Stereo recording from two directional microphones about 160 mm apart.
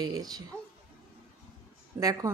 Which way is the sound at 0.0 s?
25° right (ahead or behind).